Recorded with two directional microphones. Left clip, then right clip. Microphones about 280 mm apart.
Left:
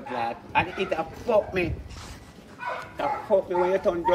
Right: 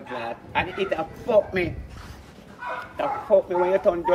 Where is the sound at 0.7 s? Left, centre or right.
Centre.